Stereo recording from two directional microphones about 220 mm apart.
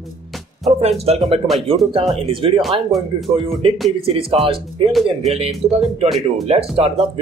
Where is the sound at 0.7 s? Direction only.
30° right (ahead or behind).